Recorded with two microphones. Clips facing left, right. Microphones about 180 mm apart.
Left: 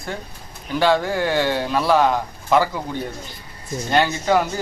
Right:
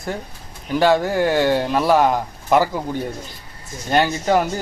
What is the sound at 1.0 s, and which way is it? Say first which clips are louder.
Speech: right 3 dB; 45° right (ahead or behind).